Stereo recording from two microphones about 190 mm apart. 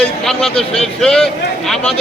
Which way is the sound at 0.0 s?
5° left (ahead or behind).